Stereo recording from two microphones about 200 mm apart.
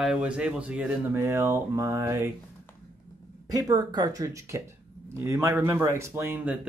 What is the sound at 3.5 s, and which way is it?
Speech, 15° right (ahead or behind).